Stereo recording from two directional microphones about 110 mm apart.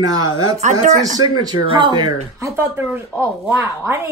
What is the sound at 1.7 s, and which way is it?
Speech, 45° right (ahead or behind).